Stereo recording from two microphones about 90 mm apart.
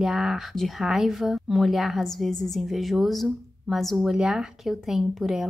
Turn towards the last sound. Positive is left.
turn(degrees=-5)  # may be behind; listen again after turning